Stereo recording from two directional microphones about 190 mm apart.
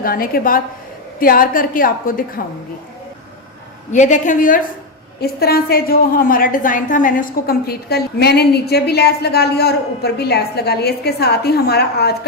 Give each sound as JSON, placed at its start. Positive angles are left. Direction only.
{"t": 0.0, "sound": "a woman's voice", "side_deg": 50}
{"t": 3.9, "sound": "a woman's voice", "side_deg": 40}
{"t": 5.2, "sound": "a woman's voice", "side_deg": 55}